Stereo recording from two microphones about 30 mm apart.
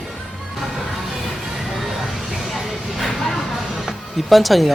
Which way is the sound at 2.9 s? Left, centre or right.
Centre.